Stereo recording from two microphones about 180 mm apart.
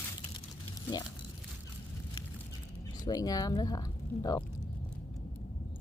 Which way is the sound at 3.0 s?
20° left (ahead or behind).